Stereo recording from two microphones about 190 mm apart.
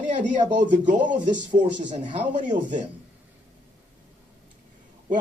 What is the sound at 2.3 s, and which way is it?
Speech, 40° right (ahead or behind).